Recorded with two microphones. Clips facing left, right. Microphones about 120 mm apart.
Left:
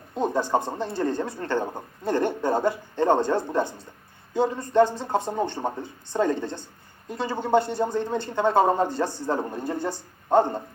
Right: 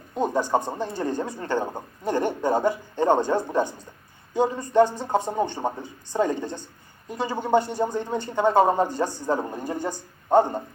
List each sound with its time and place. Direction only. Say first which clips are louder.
0.1 s a woman's voice: right 1 dB; 15° right (ahead or behind)